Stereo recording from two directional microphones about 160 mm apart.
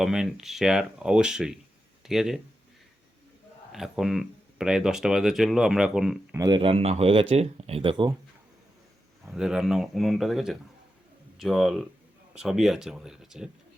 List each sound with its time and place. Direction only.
0.0 s speech: 5° right (ahead or behind)
3.7 s speech: centre (ahead or behind)
6.3 s speech: 25° right (ahead or behind)
9.2 s speech: 5° right (ahead or behind)